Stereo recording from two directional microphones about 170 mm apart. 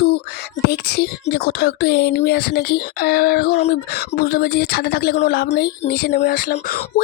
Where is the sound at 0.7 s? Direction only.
70° left (ahead or behind).